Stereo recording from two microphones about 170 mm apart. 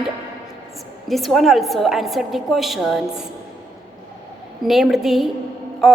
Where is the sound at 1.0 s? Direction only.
Centre (ahead or behind).